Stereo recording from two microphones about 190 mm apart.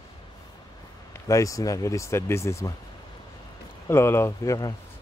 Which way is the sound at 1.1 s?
15° left (ahead or behind).